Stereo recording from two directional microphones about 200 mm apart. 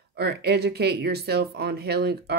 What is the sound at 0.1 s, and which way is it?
A woman's voice, 55° right (ahead or behind).